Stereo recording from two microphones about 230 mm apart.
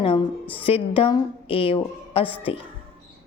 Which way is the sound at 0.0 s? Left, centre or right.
Left.